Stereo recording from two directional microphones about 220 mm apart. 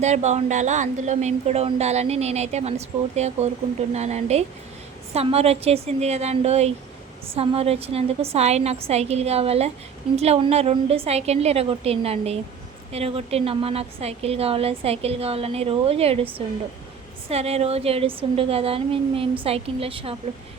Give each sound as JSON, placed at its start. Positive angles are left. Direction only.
{"t": 0.0, "sound": "a woman's voice", "side_deg": -30}
{"t": 17.2, "sound": "a woman's voice", "side_deg": -30}